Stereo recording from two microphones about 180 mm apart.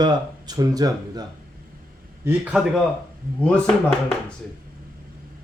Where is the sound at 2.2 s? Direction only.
10° right (ahead or behind).